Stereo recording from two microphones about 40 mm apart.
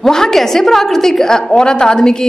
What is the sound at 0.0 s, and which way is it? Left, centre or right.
A woman's voice, centre.